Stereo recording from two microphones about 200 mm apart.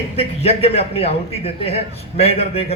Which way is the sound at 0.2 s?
30° left (ahead or behind).